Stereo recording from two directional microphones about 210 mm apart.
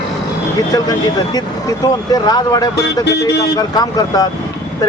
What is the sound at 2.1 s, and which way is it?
Speech, 20° left (ahead or behind).